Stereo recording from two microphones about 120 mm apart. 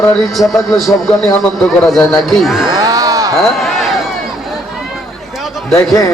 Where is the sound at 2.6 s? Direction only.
30° right (ahead or behind).